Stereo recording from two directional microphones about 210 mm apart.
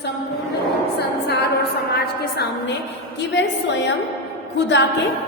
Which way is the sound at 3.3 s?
60° left (ahead or behind).